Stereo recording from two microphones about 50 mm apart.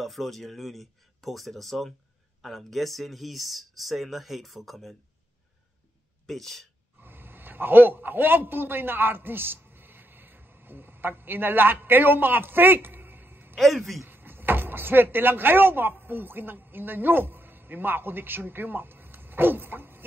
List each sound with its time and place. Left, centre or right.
0.0 s speech: centre
6.2 s speech: centre
7.0 s a man's voice: right
13.6 s speech: centre
14.0 s speech: right